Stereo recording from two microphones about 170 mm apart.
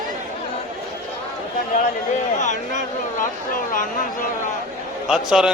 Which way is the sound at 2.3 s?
45° left (ahead or behind).